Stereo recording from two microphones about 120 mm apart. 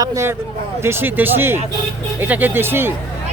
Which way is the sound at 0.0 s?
25° right (ahead or behind).